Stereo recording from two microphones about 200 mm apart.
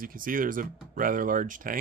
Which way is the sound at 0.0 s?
45° right (ahead or behind).